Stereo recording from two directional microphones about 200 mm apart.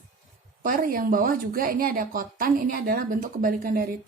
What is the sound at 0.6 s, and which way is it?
Speech, 45° right (ahead or behind).